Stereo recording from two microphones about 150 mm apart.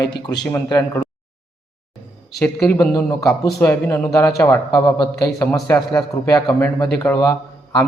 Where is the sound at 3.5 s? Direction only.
10° left (ahead or behind).